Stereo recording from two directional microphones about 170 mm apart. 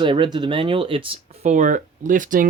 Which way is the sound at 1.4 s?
45° right (ahead or behind).